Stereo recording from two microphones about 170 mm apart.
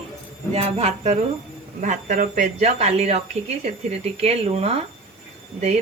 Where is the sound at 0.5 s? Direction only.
40° right (ahead or behind).